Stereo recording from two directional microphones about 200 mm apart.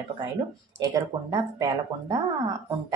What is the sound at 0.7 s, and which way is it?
Speech, 15° right (ahead or behind).